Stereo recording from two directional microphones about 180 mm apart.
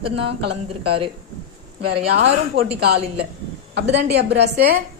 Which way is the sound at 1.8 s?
65° right (ahead or behind).